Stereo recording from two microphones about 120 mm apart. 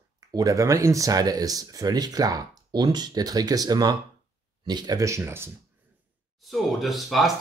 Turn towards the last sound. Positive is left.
turn(degrees=0)  # may be behind; listen again after turning